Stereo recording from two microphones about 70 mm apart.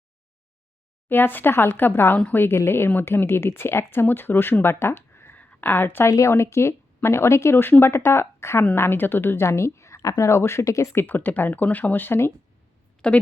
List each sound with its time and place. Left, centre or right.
1.0 s speech: left
5.4 s speech: left
11.0 s speech: left
13.0 s a woman's voice: centre